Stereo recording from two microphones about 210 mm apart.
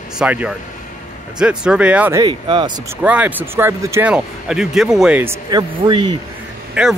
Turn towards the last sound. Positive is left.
turn(degrees=-5)  # may be behind; listen again after turning